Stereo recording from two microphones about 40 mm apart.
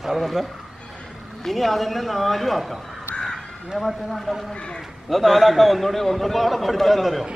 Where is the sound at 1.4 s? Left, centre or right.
Centre.